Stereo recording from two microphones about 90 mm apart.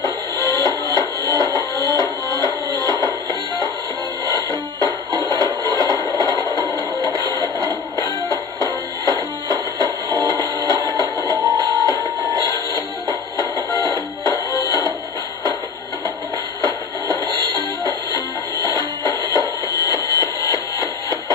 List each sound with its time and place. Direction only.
0.5 s music: 45° right (ahead or behind)
5.1 s a sound: 45° right (ahead or behind)
9.5 s music: 45° right (ahead or behind)
11.7 s music: 45° left (ahead or behind)
12.3 s music: 40° right (ahead or behind)
14.2 s music: 45° left (ahead or behind)
16.6 s music: 40° right (ahead or behind)
18.7 s music: 45° right (ahead or behind)